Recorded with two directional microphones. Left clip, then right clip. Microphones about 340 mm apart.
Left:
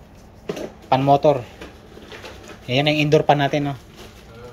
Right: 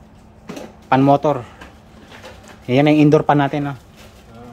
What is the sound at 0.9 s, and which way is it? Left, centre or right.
Speech, centre.